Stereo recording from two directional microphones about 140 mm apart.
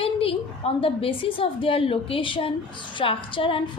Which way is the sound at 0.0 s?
40° left (ahead or behind).